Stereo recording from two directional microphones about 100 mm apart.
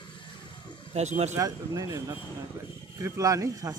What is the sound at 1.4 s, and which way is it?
Speech, 35° right (ahead or behind).